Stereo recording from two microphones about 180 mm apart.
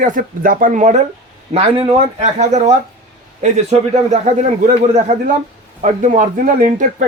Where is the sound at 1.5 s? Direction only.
35° right (ahead or behind).